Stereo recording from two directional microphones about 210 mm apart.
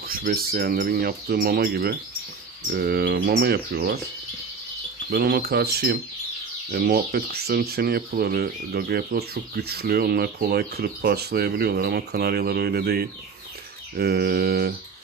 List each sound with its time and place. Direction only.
0.0 s speech: 45° right (ahead or behind)
5.1 s speech: 45° right (ahead or behind)